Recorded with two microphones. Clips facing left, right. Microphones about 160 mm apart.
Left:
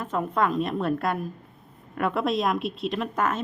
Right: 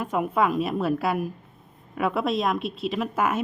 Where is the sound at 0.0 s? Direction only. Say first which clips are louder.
Right 2 dB; 10° right (ahead or behind).